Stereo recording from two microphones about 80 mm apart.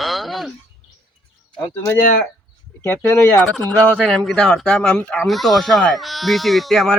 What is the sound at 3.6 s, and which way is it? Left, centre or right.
Speech, centre.